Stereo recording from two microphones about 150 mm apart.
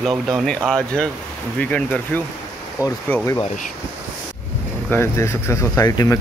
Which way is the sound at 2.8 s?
25° left (ahead or behind).